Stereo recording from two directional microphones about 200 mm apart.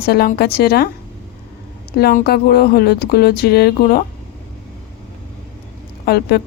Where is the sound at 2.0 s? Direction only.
50° left (ahead or behind).